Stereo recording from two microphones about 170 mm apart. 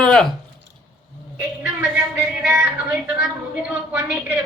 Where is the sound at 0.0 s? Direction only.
5° left (ahead or behind).